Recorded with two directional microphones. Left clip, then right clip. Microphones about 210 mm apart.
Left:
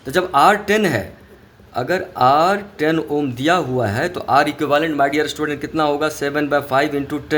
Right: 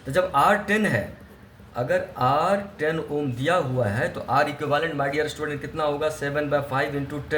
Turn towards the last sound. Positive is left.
turn(degrees=50)  # may be behind; listen again after turning